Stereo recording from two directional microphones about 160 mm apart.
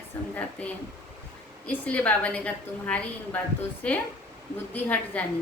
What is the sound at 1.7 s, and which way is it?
A woman's voice, 10° left (ahead or behind).